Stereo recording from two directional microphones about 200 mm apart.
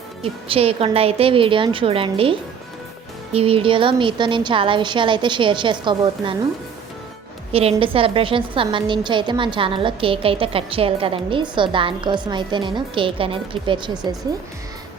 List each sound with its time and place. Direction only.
0.2 s a woman's voice: 30° right (ahead or behind)
7.5 s a woman's voice: 30° right (ahead or behind)